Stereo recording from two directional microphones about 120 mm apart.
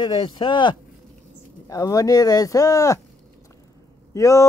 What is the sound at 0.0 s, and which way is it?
Speech, 40° left (ahead or behind).